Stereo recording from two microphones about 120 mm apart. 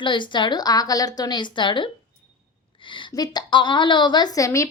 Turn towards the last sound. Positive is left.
turn(degrees=25)  # may be behind; listen again after turning